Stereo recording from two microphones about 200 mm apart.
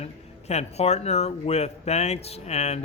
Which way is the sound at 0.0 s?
30° left (ahead or behind).